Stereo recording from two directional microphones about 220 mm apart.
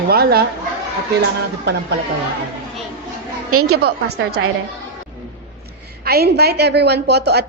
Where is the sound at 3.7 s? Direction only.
45° right (ahead or behind).